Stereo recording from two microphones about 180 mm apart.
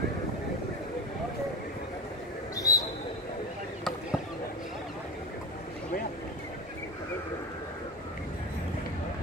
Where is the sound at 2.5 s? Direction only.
20° left (ahead or behind).